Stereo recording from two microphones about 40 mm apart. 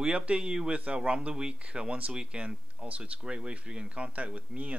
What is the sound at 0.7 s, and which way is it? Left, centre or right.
Speech, right.